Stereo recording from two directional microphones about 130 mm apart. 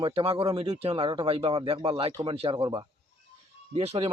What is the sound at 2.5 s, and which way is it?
Speech, 35° right (ahead or behind).